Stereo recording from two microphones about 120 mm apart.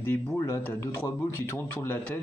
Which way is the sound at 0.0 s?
20° left (ahead or behind).